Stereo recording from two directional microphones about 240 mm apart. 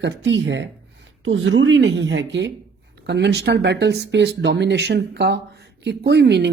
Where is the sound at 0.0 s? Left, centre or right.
Right.